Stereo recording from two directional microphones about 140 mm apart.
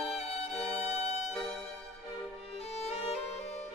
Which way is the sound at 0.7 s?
50° left (ahead or behind).